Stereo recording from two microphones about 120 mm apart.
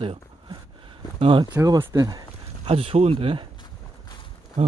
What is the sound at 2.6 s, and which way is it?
Speech, 50° right (ahead or behind).